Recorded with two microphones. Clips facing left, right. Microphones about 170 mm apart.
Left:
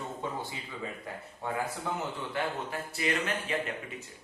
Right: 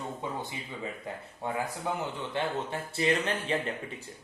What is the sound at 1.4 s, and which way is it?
Speech, 20° right (ahead or behind).